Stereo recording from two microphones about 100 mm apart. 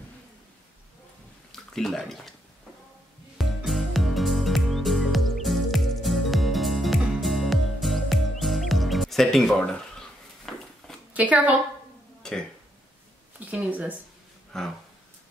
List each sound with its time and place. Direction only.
1.5 s speech: 5° left (ahead or behind)
3.3 s music: centre (ahead or behind)
11.1 s a woman's voice: 15° right (ahead or behind)
12.2 s burping: 5° left (ahead or behind)
13.4 s speech: 15° right (ahead or behind)
14.5 s speech: 5° left (ahead or behind)